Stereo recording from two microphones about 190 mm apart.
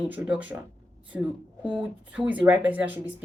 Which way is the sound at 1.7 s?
5° right (ahead or behind).